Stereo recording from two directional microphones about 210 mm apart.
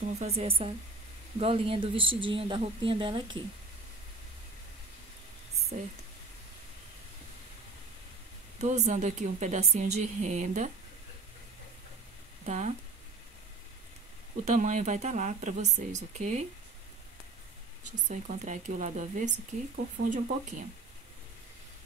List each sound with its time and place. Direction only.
0.0 s a woman's voice: 30° right (ahead or behind)
5.7 s a woman's voice: 35° right (ahead or behind)
8.5 s a woman's voice: 35° right (ahead or behind)
12.4 s a woman's voice: 35° right (ahead or behind)
14.4 s a woman's voice: 35° right (ahead or behind)
18.0 s a woman's voice: 35° right (ahead or behind)